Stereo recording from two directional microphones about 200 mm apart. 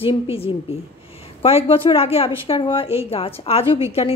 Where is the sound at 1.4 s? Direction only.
25° left (ahead or behind).